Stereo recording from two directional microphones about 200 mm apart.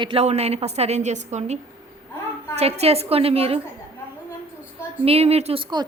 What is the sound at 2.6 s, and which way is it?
A woman's voice, 30° right (ahead or behind).